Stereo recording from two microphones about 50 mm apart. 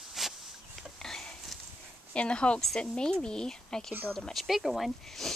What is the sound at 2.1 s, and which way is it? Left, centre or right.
Speech, left.